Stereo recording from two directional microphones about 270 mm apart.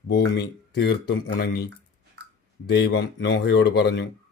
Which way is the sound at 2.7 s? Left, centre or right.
Left.